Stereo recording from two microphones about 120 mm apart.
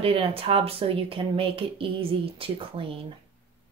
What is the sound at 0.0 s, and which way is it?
Speech, 50° right (ahead or behind).